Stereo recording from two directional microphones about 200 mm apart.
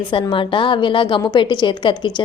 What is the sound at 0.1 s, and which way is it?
A woman's voice, 25° left (ahead or behind).